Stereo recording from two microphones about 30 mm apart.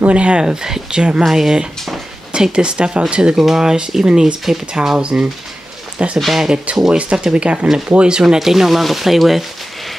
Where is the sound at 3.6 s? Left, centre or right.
Right.